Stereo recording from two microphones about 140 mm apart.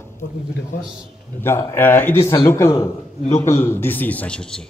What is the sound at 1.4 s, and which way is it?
A man's voice, 20° left (ahead or behind).